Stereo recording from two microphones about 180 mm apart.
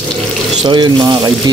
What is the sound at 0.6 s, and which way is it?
Speech, 25° right (ahead or behind).